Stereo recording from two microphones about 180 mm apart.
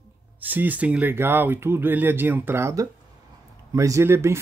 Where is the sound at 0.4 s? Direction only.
10° right (ahead or behind).